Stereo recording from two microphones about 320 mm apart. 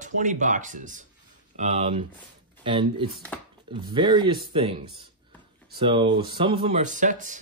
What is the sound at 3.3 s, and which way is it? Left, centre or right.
Speech, centre.